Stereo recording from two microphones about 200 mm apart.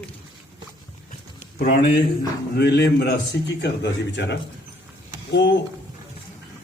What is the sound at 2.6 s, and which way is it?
Speech, 55° left (ahead or behind).